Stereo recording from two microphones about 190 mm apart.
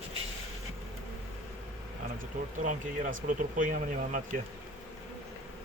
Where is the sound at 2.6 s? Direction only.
45° right (ahead or behind).